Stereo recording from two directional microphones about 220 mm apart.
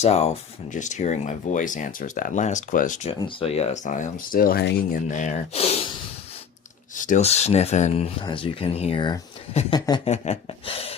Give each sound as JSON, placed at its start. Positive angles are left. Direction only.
{"t": 0.0, "sound": "speech", "side_deg": 30}
{"t": 5.1, "sound": "speech", "side_deg": 35}